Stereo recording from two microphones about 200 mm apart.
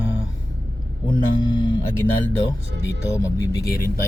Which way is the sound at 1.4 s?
20° left (ahead or behind).